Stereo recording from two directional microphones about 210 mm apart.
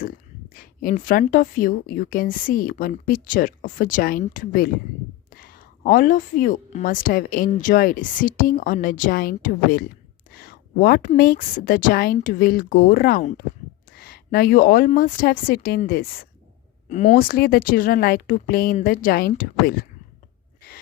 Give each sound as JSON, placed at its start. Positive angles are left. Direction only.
{"t": 0.5, "sound": "a woman's voice", "side_deg": 40}